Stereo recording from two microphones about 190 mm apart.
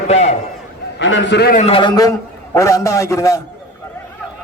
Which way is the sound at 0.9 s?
75° left (ahead or behind).